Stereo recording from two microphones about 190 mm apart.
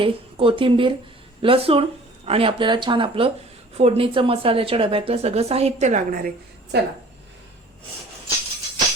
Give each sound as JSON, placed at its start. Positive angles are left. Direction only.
{"t": 0.0, "sound": "a woman's voice", "side_deg": -30}
{"t": 6.7, "sound": "a woman's voice", "side_deg": -60}